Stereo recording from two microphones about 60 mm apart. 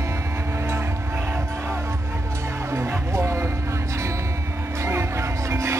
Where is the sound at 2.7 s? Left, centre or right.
Right.